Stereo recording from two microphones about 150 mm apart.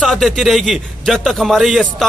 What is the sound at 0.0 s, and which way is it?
Speech, centre (ahead or behind).